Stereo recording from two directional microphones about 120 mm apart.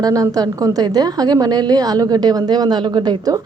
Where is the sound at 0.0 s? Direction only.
30° right (ahead or behind).